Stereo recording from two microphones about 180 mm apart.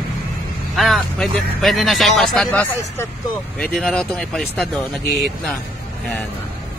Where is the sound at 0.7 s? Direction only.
Centre (ahead or behind).